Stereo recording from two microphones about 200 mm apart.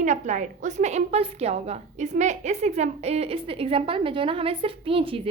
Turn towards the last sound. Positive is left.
turn(degrees=-25)  # may be behind; listen again after turning